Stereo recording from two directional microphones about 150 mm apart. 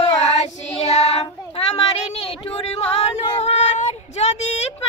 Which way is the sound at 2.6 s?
45° left (ahead or behind).